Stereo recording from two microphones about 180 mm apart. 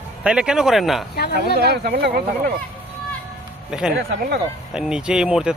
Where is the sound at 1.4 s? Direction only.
65° right (ahead or behind).